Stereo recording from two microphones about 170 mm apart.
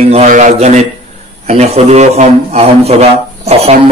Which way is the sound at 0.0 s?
40° right (ahead or behind).